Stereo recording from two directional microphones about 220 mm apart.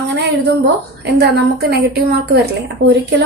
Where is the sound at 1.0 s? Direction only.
50° right (ahead or behind).